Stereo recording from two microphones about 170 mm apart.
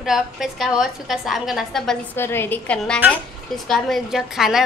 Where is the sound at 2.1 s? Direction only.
15° left (ahead or behind).